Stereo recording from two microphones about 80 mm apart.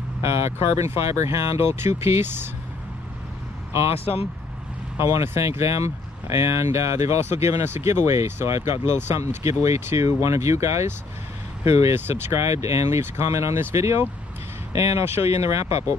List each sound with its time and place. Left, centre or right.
0.2 s speech: right
4.9 s speech: right
11.9 s speech: right